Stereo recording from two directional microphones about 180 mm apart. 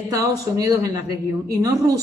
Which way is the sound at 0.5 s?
20° right (ahead or behind).